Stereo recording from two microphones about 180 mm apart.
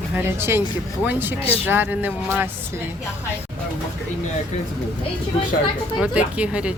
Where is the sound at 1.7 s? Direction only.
10° right (ahead or behind).